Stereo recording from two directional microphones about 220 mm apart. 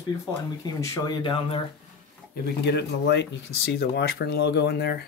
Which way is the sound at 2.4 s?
50° left (ahead or behind).